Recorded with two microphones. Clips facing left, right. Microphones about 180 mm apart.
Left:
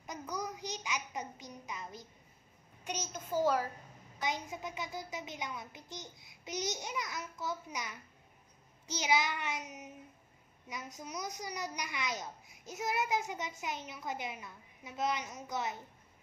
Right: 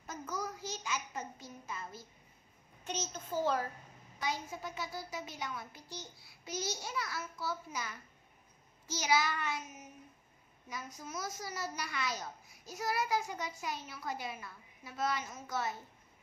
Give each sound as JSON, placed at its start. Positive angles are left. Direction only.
{"t": 0.0, "sound": "a child's voice", "side_deg": 15}